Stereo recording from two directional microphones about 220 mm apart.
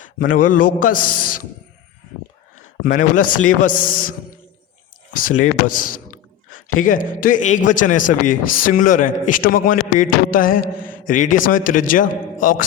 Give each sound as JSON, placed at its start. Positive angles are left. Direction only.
{"t": 0.2, "sound": "a man's voice", "side_deg": 40}
{"t": 2.8, "sound": "a man's voice", "side_deg": 35}
{"t": 5.1, "sound": "a man's voice", "side_deg": 40}
{"t": 6.5, "sound": "a sound", "side_deg": 70}
{"t": 6.8, "sound": "a man's voice", "side_deg": 40}